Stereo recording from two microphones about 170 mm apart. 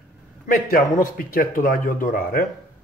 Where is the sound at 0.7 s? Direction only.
60° left (ahead or behind).